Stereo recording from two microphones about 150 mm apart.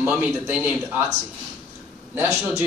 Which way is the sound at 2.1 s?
20° right (ahead or behind).